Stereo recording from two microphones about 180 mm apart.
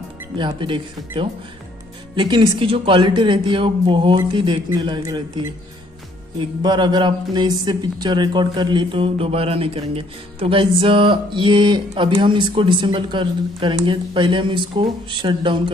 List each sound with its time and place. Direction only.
0.4 s a man's voice: 25° right (ahead or behind)
6.6 s a man's voice: 25° right (ahead or behind)